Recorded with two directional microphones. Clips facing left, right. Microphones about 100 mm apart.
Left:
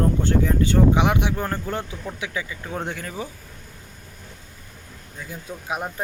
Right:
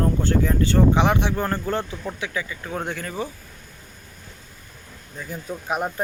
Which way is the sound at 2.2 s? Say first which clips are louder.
Left 1 dB; 15° left (ahead or behind).